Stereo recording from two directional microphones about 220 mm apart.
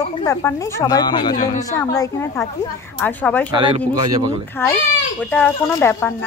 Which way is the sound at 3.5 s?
25° right (ahead or behind).